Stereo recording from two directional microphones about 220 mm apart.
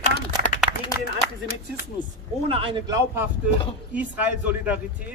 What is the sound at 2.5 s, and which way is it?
A man's voice, 25° right (ahead or behind).